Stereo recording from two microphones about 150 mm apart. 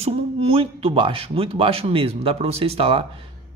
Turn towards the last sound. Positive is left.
turn(degrees=-40)  # may be behind; listen again after turning